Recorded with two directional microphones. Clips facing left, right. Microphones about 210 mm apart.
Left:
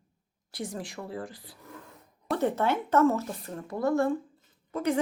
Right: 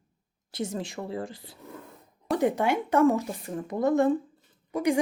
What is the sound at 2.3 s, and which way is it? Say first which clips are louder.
A woman's voice: right 2 dB; 15° right (ahead or behind).